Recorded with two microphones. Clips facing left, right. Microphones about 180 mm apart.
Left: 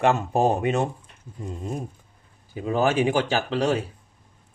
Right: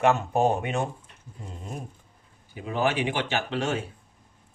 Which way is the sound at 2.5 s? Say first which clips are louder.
Left 4 dB; 40° left (ahead or behind).